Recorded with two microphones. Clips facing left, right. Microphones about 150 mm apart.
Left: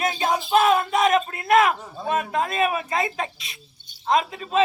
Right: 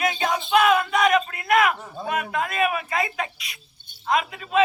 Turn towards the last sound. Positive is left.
turn(degrees=30)  # may be behind; listen again after turning